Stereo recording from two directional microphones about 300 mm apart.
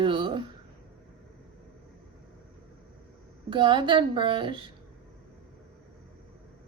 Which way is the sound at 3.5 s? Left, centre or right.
Centre.